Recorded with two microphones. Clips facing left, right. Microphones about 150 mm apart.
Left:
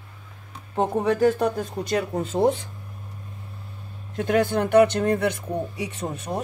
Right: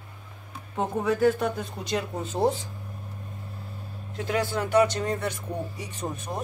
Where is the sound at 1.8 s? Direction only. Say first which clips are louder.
Left 4 dB; 55° left (ahead or behind).